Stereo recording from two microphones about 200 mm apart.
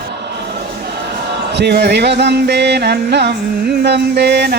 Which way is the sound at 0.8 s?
55° right (ahead or behind).